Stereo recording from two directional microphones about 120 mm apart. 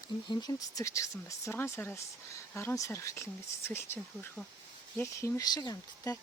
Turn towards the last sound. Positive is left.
turn(degrees=30)  # may be behind; listen again after turning